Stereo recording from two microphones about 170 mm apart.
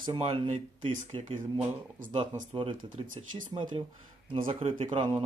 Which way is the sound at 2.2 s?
30° right (ahead or behind).